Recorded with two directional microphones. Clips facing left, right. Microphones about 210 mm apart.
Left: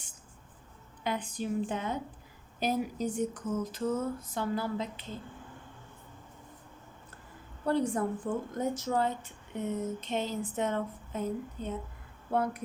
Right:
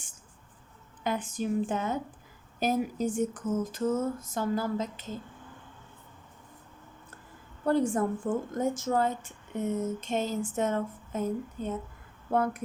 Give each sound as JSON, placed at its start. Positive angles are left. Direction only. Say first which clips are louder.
{"t": 1.0, "sound": "a woman's voice", "louder": "right 3 dB", "side_deg": -45}
{"t": 7.7, "sound": "a woman's voice", "louder": "right 3 dB", "side_deg": -50}